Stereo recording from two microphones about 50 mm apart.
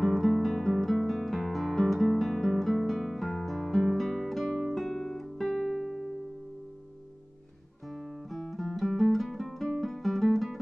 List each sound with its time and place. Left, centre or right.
0.0 s music: centre
7.9 s guitar: centre
9.1 s music: centre